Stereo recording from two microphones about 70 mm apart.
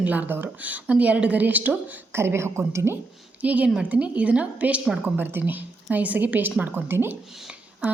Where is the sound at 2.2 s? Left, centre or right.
Right.